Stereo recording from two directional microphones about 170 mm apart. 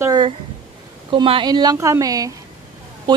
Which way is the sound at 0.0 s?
25° right (ahead or behind).